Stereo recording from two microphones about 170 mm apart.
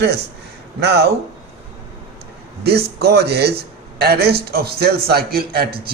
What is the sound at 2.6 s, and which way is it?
A man's voice, 70° right (ahead or behind).